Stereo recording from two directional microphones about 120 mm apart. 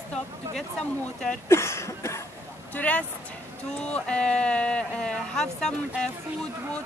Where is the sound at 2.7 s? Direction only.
10° left (ahead or behind).